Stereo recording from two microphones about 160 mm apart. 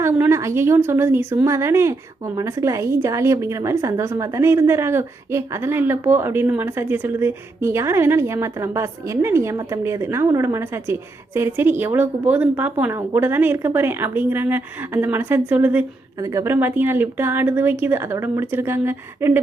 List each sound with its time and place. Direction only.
0.0 s speech: 15° right (ahead or behind)